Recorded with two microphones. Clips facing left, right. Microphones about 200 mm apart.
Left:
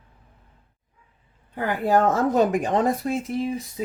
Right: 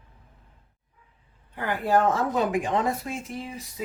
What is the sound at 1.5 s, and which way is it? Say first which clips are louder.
Speech: left 3 dB; 45° left (ahead or behind).